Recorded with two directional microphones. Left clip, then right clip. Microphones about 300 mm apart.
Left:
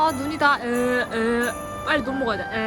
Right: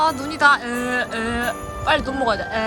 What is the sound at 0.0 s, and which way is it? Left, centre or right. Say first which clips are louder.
Speech: right 3 dB; centre.